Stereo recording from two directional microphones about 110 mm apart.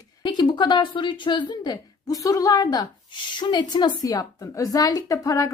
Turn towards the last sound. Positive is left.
turn(degrees=30)  # may be behind; listen again after turning